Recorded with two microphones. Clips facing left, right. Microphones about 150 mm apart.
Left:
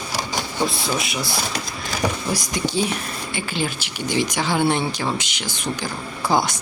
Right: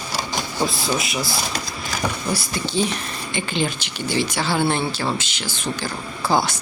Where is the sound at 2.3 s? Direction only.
15° left (ahead or behind).